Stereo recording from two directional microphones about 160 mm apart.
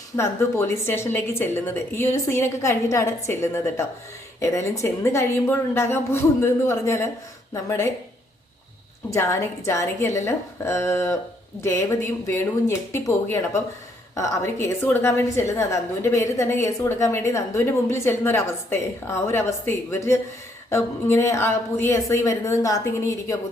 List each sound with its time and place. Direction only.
0.2 s a woman's voice: 15° left (ahead or behind)
9.1 s a woman's voice: 15° left (ahead or behind)